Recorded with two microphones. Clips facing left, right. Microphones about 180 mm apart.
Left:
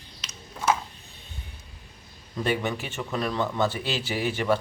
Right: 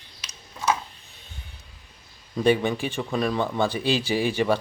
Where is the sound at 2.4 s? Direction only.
15° right (ahead or behind).